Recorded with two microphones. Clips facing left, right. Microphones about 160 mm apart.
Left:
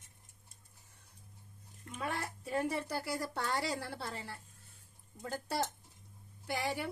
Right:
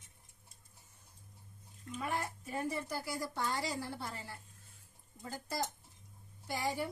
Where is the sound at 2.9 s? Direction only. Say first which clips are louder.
Left 2 dB; 65° left (ahead or behind).